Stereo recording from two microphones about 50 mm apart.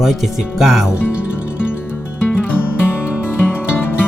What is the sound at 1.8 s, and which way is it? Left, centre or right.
Music, left.